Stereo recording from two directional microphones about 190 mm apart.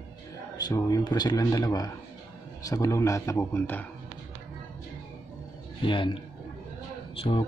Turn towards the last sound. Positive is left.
turn(degrees=30)  # may be behind; listen again after turning